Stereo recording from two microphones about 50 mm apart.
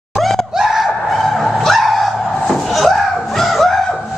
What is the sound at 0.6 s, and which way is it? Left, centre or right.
Car, centre.